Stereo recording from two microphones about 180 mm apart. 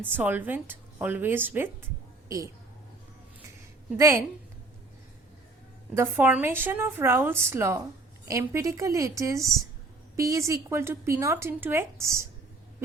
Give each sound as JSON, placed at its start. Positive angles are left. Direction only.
{"t": 0.0, "sound": "speech", "side_deg": -10}
{"t": 3.9, "sound": "speech", "side_deg": -15}
{"t": 5.9, "sound": "speech", "side_deg": -10}